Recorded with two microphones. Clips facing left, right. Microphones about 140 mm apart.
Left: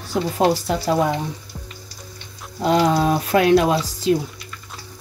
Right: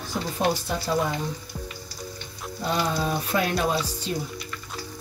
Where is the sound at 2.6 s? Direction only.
90° left.